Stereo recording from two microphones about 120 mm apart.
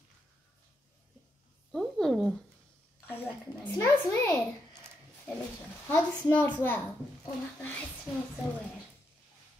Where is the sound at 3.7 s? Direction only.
20° left (ahead or behind).